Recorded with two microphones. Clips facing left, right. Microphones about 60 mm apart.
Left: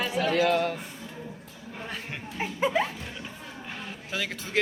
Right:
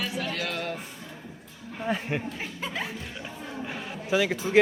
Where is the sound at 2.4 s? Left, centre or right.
Centre.